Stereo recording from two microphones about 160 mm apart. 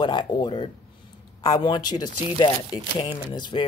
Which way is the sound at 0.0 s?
30° left (ahead or behind).